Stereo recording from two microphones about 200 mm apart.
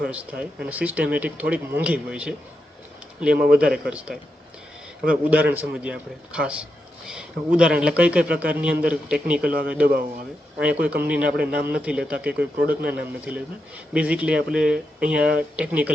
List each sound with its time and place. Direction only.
0.0 s speech: 5° right (ahead or behind)
3.5 s a man's voice: 5° right (ahead or behind)
9.8 s speech: 45° right (ahead or behind)
10.6 s a man's voice: 5° right (ahead or behind)